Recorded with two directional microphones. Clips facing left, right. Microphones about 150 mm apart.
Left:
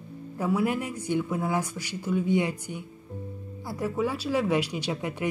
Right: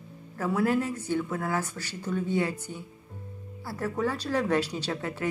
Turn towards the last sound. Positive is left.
turn(degrees=15)  # may be behind; listen again after turning